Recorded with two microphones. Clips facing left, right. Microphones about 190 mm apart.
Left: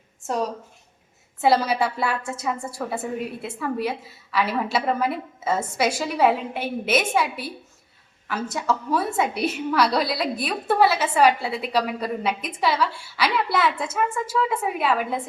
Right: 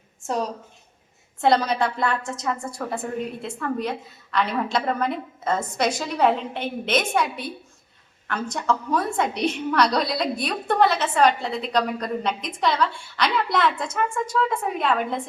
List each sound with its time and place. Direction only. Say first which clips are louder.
0.3 s a woman's voice: left 1 dB; centre (ahead or behind)